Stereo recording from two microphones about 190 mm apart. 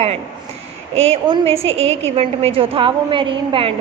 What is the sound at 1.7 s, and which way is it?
Speech, 90° right.